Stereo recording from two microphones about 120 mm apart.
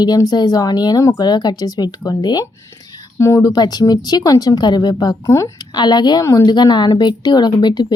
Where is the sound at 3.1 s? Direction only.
25° left (ahead or behind).